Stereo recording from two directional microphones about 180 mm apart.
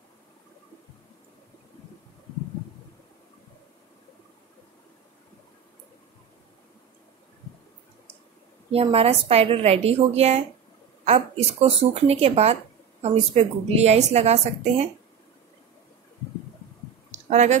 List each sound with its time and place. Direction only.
8.7 s a woman's voice: 35° right (ahead or behind)
17.3 s speech: 40° right (ahead or behind)